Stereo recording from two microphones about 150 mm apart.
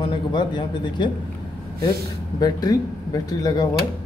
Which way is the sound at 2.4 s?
25° left (ahead or behind).